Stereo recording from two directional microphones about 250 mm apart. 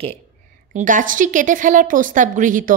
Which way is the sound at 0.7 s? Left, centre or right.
Right.